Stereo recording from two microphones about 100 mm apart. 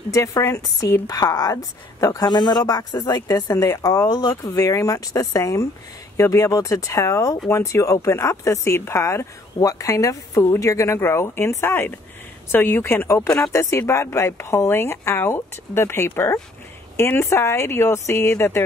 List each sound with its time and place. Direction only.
0.1 s speech: 30° left (ahead or behind)